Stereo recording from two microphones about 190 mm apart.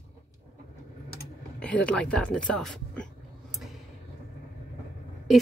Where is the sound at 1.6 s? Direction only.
5° left (ahead or behind).